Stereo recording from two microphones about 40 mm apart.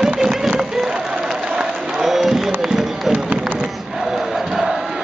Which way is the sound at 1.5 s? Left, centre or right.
Centre.